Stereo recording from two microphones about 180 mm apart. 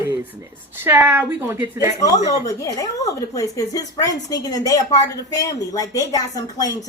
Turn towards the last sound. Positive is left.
turn(degrees=20)  # may be behind; listen again after turning